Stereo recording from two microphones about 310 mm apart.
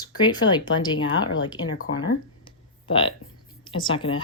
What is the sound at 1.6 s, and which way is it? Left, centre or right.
Speech, left.